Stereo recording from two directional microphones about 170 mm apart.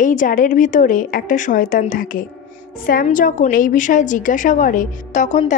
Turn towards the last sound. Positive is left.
turn(degrees=45)  # may be behind; listen again after turning